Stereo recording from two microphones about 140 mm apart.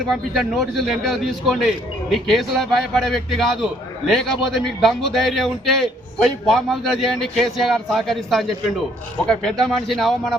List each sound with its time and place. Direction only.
0.1 s a man's voice: centre (ahead or behind)